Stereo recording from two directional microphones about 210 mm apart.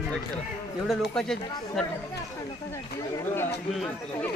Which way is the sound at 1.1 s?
5° left (ahead or behind).